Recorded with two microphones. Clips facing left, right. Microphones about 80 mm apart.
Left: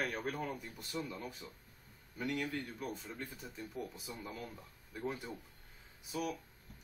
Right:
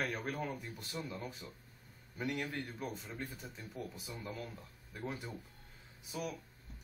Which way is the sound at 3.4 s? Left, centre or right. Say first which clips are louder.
Left 2 dB; centre.